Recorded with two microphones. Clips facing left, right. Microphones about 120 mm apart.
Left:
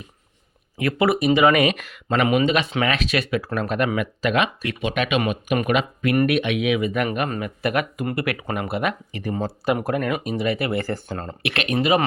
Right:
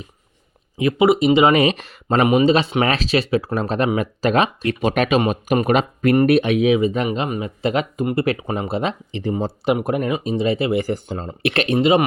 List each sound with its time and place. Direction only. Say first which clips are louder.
0.8 s speech: right 5 dB; 20° right (ahead or behind)
11.4 s speech: right 6 dB; 35° right (ahead or behind)
11.8 s speech: right 4 dB; 25° right (ahead or behind)